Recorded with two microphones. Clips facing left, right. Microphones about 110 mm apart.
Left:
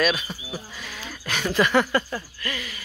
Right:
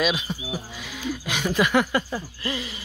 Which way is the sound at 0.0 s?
15° right (ahead or behind).